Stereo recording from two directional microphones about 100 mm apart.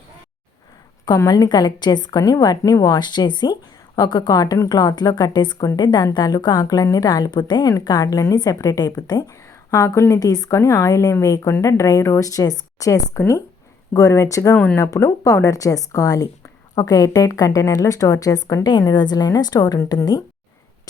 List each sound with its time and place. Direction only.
1.3 s a woman's voice: 45° left (ahead or behind)
14.5 s speech: 15° left (ahead or behind)
14.8 s a woman's voice: 30° left (ahead or behind)